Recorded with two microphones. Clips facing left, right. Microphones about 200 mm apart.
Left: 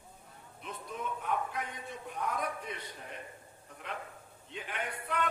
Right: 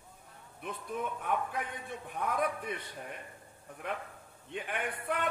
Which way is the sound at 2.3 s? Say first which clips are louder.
Right 5 dB; 55° right (ahead or behind).